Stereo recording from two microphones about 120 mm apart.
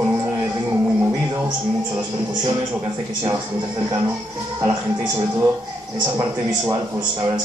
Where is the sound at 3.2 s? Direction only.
40° right (ahead or behind).